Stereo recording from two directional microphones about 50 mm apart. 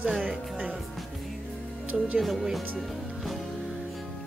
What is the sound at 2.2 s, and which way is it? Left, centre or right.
Speech, centre.